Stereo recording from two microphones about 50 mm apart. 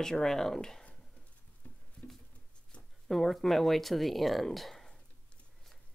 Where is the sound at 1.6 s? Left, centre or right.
Left.